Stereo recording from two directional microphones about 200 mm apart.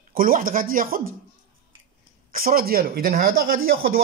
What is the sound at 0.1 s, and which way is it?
Speech, 45° right (ahead or behind).